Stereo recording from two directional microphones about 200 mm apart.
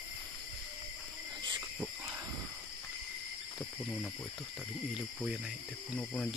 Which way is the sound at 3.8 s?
5° left (ahead or behind).